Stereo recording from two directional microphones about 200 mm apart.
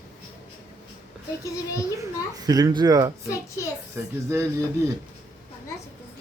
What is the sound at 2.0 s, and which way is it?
A child's voice, 20° right (ahead or behind).